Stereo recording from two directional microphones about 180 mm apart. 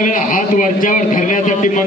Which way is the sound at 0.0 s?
45° left (ahead or behind).